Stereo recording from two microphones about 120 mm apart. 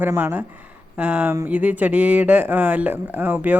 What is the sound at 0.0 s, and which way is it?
Speech, 20° right (ahead or behind).